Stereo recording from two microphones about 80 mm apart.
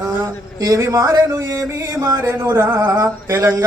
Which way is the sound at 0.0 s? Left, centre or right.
Right.